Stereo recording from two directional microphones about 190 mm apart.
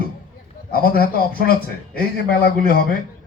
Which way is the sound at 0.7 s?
50° left (ahead or behind).